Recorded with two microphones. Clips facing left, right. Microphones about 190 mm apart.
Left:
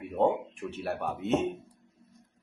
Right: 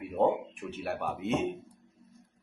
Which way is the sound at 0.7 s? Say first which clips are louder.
Left 1 dB; centre (ahead or behind).